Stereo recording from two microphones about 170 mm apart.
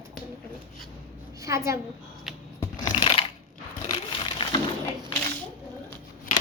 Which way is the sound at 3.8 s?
30° left (ahead or behind).